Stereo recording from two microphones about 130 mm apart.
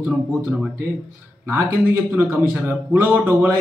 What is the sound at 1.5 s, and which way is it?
Speech, 15° right (ahead or behind).